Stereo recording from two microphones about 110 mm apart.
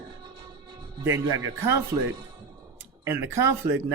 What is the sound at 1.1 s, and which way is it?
Speech, 25° right (ahead or behind).